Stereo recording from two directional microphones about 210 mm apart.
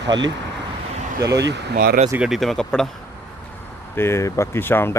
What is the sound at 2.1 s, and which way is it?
Speech, 5° right (ahead or behind).